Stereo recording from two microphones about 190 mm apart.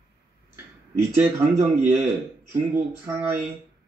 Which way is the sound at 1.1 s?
10° right (ahead or behind).